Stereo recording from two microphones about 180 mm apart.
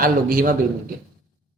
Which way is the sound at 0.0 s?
50° right (ahead or behind).